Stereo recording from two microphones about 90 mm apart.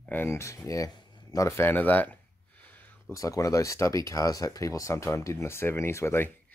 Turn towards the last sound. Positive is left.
turn(degrees=30)  # may be behind; listen again after turning